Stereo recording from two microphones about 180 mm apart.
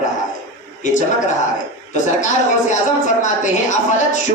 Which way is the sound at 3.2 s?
45° left (ahead or behind).